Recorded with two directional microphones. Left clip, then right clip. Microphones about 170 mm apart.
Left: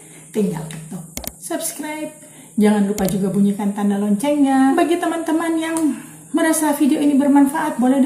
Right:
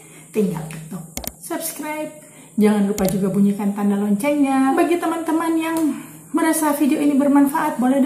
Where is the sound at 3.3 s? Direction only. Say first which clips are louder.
Even; 20° left (ahead or behind).